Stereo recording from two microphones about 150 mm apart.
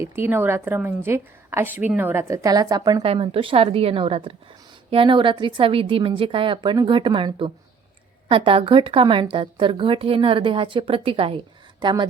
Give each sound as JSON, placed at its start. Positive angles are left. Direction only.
{"t": 0.0, "sound": "a woman's voice", "side_deg": -15}
{"t": 3.0, "sound": "a woman's voice", "side_deg": -40}